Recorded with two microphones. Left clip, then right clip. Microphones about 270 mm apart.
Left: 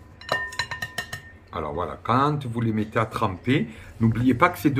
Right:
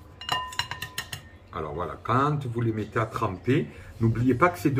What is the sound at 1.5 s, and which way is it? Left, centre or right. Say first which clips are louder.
Speech: left 3 dB; left.